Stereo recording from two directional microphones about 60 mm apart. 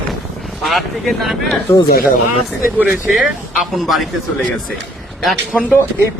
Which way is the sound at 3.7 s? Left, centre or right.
Centre.